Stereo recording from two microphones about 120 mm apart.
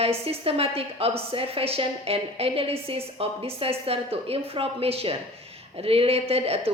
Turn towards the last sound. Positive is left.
turn(degrees=-55)  # may be behind; listen again after turning